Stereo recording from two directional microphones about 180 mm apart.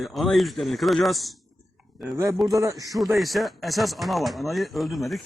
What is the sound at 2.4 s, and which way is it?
Speech, 20° right (ahead or behind).